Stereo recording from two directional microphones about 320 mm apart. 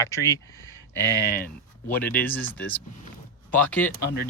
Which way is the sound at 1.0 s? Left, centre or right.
Left.